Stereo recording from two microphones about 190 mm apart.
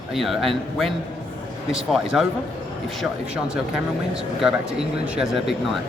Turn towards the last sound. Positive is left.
turn(degrees=0)  # may be behind; listen again after turning